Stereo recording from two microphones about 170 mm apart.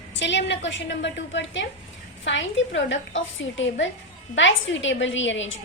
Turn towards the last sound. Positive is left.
turn(degrees=90)